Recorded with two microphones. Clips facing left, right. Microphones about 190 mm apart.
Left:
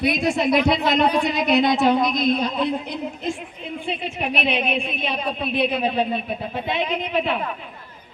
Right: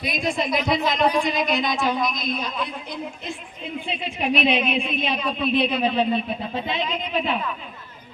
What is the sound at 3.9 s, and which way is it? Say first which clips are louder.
A woman's voice: right 2 dB; 55° left (ahead or behind).